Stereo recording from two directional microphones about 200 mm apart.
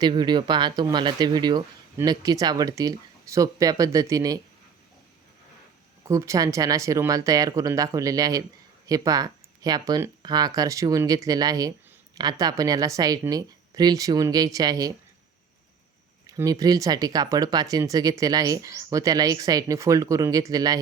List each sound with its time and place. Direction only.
0.0 s speech: 20° right (ahead or behind)
6.1 s a woman's voice: 15° right (ahead or behind)
16.2 s speech: 20° right (ahead or behind)